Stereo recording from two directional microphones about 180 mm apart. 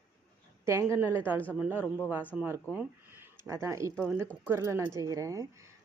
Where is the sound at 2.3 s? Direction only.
10° right (ahead or behind).